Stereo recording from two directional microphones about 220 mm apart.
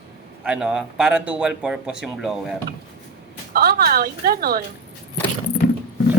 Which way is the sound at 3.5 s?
45° right (ahead or behind).